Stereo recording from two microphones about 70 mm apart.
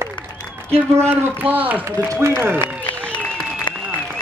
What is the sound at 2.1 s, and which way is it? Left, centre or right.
Speech, right.